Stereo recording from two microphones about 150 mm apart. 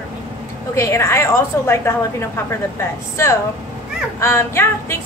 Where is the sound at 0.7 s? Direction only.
20° left (ahead or behind).